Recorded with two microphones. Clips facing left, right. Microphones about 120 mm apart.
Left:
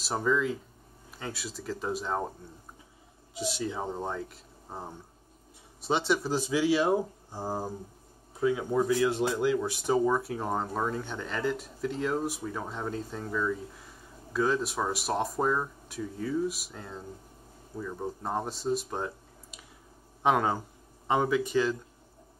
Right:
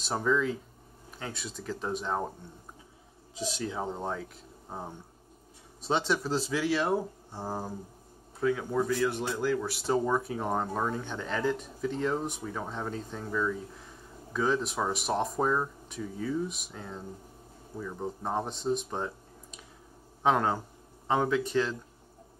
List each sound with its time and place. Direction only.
0.0 s a man's voice: centre (ahead or behind)
3.4 s a man's voice: 5° left (ahead or behind)
9.1 s speech: 25° left (ahead or behind)
10.0 s a man's voice: centre (ahead or behind)